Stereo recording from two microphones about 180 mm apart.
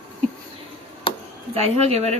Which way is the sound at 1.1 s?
25° left (ahead or behind).